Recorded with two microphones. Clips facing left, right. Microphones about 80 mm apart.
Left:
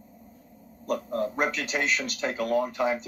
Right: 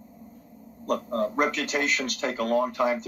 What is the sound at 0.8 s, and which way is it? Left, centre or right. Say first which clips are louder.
Speech: right 2 dB; right.